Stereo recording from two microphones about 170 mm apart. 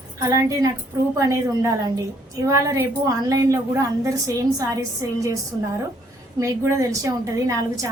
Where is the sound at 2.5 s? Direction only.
20° right (ahead or behind).